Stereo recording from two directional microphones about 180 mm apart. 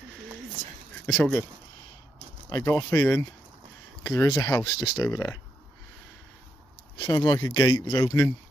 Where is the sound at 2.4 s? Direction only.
15° left (ahead or behind).